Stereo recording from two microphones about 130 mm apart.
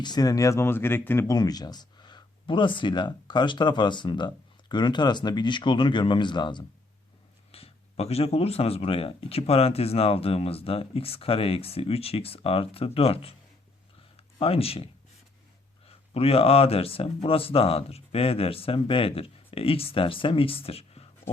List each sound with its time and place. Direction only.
0.0 s speech: 30° left (ahead or behind); by 1.3 s 15° left (ahead or behind)
1.3 s speech: 30° left (ahead or behind)
7.5 s speech: 50° left (ahead or behind)
14.3 s speech: 50° left (ahead or behind)
15.9 s speech: 50° left (ahead or behind)